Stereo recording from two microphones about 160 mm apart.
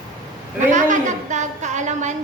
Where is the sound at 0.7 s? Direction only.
50° right (ahead or behind).